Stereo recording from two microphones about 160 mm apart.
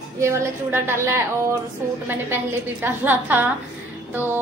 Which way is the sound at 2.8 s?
10° right (ahead or behind).